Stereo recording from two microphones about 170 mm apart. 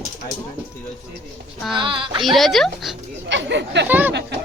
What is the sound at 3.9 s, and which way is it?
Speech, 10° right (ahead or behind).